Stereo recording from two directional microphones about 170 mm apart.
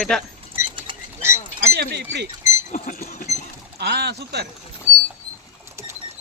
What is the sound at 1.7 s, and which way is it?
Speech, 75° right (ahead or behind).